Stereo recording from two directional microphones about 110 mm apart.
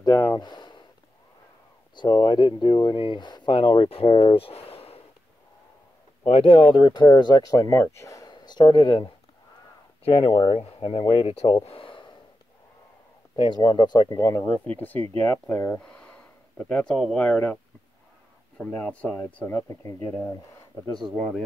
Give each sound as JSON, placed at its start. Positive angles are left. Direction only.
{"t": 0.0, "sound": "speech", "side_deg": 35}
{"t": 2.2, "sound": "speech", "side_deg": 45}
{"t": 3.9, "sound": "speech", "side_deg": 55}
{"t": 6.2, "sound": "speech", "side_deg": 65}
{"t": 10.6, "sound": "speech", "side_deg": 60}
{"t": 11.6, "sound": "a sound", "side_deg": 55}
{"t": 13.4, "sound": "speech", "side_deg": 40}
{"t": 15.8, "sound": "a sound", "side_deg": 10}
{"t": 18.6, "sound": "speech", "side_deg": 15}